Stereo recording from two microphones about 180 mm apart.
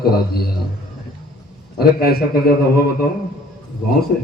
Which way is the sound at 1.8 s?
60° left (ahead or behind).